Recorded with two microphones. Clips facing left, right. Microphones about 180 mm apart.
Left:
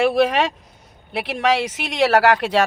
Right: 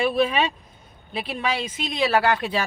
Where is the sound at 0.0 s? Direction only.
85° left.